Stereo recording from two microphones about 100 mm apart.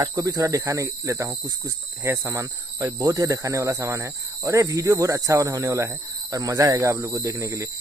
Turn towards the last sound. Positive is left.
turn(degrees=-25)  # may be behind; listen again after turning